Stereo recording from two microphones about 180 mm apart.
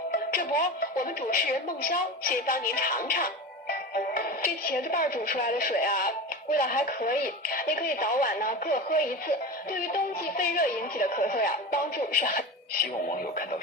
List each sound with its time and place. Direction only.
0.3 s a woman's voice: 50° left (ahead or behind)